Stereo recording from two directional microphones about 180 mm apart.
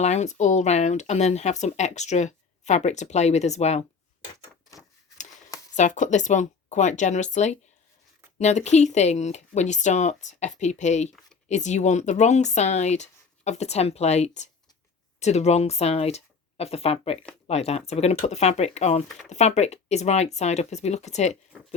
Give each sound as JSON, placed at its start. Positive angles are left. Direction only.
{"t": 0.0, "sound": "speech", "side_deg": 40}
{"t": 5.7, "sound": "speech", "side_deg": 40}